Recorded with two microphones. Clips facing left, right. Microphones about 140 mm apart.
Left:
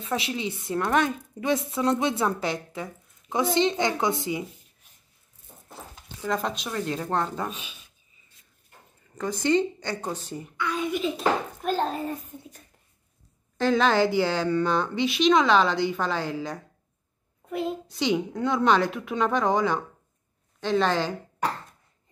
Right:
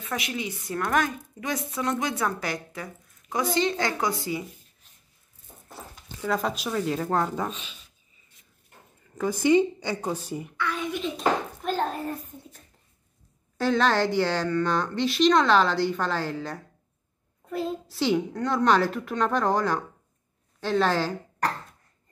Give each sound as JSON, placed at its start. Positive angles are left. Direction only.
{"t": 0.0, "sound": "a woman's voice", "side_deg": 30}
{"t": 6.2, "sound": "a woman's voice", "side_deg": -5}
{"t": 7.4, "sound": "a child's voice", "side_deg": 10}
{"t": 9.2, "sound": "a woman's voice", "side_deg": -10}
{"t": 10.6, "sound": "a child's voice", "side_deg": 15}
{"t": 11.0, "sound": "a child's voice", "side_deg": 5}
{"t": 13.6, "sound": "a woman's voice", "side_deg": 0}